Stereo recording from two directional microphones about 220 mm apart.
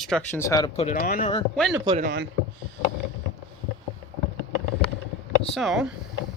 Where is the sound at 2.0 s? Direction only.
45° right (ahead or behind).